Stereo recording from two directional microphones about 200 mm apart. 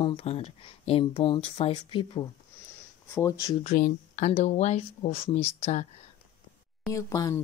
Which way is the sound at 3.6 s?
45° left (ahead or behind).